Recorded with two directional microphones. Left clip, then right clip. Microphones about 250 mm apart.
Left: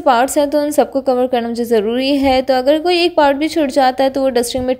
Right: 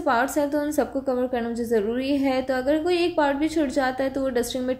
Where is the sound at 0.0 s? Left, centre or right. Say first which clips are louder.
Left 10 dB; left.